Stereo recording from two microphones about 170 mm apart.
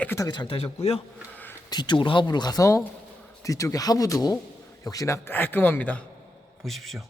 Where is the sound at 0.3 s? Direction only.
30° left (ahead or behind).